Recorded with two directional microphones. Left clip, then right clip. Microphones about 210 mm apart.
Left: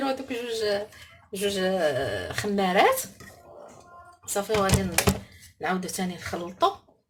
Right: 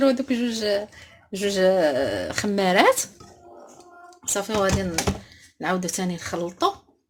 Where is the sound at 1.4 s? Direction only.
35° right (ahead or behind).